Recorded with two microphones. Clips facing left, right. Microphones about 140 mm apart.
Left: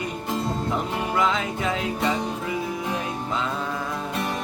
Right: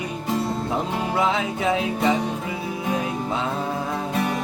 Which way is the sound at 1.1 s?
25° right (ahead or behind).